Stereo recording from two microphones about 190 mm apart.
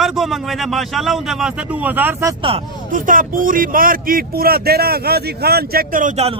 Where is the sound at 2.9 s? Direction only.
45° right (ahead or behind).